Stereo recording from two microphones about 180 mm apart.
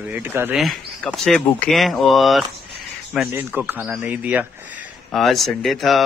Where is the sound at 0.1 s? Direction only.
10° right (ahead or behind).